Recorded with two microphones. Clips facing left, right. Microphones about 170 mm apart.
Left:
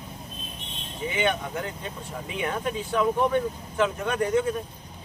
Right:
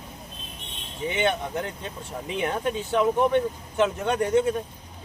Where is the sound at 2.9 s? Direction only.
25° right (ahead or behind).